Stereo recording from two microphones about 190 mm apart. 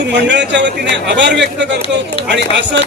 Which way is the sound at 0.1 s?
65° right (ahead or behind).